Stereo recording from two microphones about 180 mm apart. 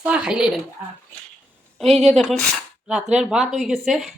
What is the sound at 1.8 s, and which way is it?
Speech, 35° right (ahead or behind).